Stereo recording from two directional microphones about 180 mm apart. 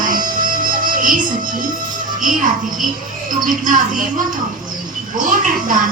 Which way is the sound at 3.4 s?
45° right (ahead or behind).